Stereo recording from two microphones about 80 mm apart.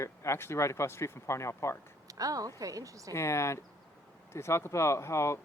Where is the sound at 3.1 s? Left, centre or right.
Left.